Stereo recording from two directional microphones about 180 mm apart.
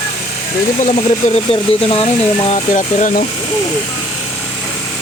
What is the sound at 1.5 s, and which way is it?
Speech, 30° left (ahead or behind).